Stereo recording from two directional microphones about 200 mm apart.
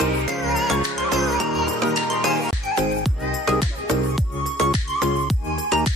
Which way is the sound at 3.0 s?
Centre (ahead or behind).